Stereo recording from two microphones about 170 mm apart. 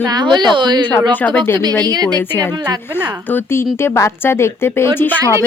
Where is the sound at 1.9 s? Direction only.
25° right (ahead or behind).